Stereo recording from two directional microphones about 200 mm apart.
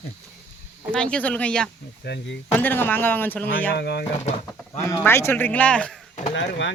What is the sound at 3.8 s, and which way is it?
Speech, 55° left (ahead or behind).